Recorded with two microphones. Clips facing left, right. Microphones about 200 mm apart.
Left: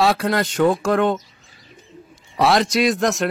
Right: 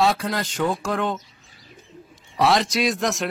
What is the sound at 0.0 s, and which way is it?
Speech, 65° left (ahead or behind).